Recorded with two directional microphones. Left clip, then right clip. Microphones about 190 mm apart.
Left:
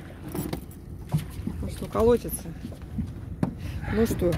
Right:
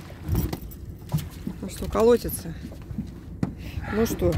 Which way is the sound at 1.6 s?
30° right (ahead or behind).